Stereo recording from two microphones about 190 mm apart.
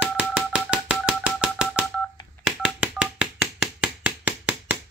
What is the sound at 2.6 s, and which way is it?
Telephone dialing, 5° right (ahead or behind).